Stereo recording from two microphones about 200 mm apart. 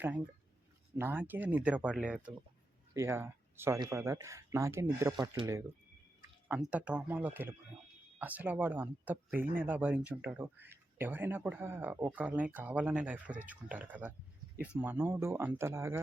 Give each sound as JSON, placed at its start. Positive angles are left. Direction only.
{"t": 0.9, "sound": "speech", "side_deg": -10}